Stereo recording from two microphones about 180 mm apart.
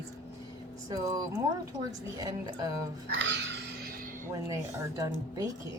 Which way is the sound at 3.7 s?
55° right (ahead or behind).